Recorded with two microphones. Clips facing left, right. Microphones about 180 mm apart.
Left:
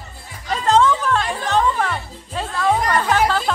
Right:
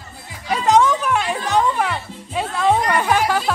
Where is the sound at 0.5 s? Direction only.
15° right (ahead or behind).